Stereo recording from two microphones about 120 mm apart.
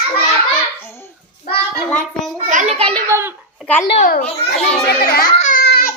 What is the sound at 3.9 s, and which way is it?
Speech, 75° left (ahead or behind).